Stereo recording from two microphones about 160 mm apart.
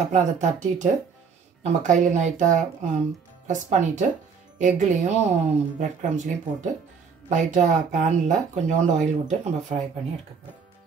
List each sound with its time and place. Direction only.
0.1 s speech: 45° right (ahead or behind)